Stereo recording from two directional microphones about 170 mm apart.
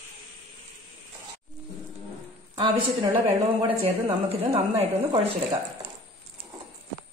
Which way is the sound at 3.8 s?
30° right (ahead or behind).